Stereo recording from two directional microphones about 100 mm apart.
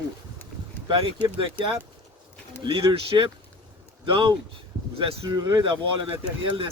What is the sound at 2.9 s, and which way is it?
Speech, 60° right (ahead or behind).